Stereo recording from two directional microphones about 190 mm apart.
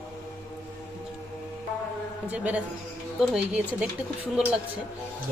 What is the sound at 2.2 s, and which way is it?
Speech, 5° right (ahead or behind).